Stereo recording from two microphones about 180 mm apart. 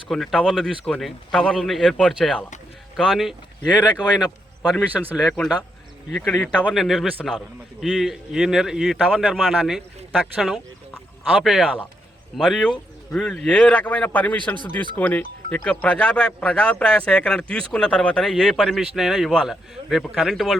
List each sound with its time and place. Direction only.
0.1 s speech: centre (ahead or behind)
3.9 s speech: 25° left (ahead or behind)
4.7 s speech: centre (ahead or behind)
12.4 s a man's voice: centre (ahead or behind)